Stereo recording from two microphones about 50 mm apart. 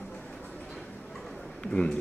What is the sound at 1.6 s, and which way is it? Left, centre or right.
Speech, centre.